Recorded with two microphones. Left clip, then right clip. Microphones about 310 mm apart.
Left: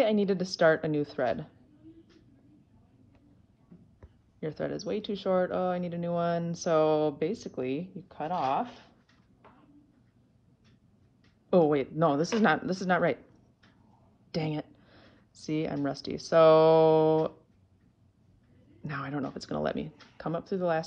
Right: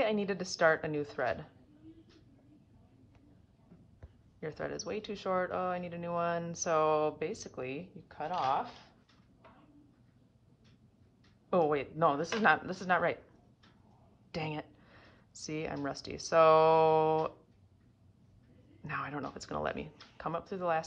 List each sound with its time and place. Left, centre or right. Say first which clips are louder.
0.0 s speech: left 6 dB; centre
4.4 s speech: left 5 dB; centre
8.3 s speech: left 3 dB; right
11.5 s speech: left 5 dB; centre
14.3 s a sound: left 5 dB; centre
15.5 s speech: left 6 dB; centre
18.9 s speech: left 3 dB; centre